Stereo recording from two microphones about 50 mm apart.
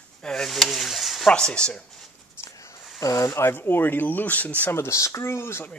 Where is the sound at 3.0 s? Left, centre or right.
Left.